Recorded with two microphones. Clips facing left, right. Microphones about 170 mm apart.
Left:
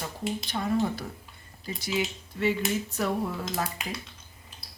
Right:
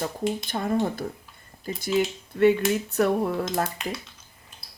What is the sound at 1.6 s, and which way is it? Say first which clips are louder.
Speech: right 6 dB; 50° right (ahead or behind).